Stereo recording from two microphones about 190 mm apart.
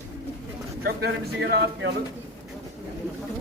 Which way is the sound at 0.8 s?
55° right (ahead or behind).